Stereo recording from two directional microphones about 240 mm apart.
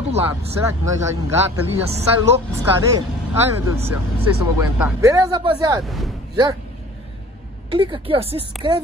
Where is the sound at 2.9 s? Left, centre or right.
Centre.